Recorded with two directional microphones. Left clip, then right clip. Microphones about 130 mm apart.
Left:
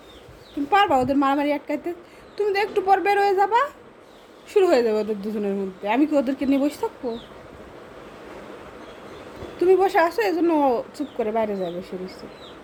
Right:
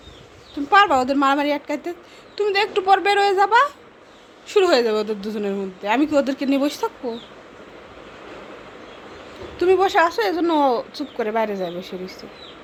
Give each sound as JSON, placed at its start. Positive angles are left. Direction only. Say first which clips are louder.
{"t": 0.7, "sound": "a woman's voice", "louder": "right 3 dB", "side_deg": 10}
{"t": 9.6, "sound": "a woman's voice", "louder": "right 1 dB", "side_deg": 10}
{"t": 10.7, "sound": "speech", "louder": "right 2 dB", "side_deg": -15}
{"t": 11.2, "sound": "a woman's voice", "louder": "right 2 dB", "side_deg": 5}